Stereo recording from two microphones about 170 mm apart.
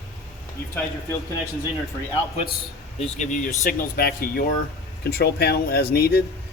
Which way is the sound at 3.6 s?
60° left (ahead or behind).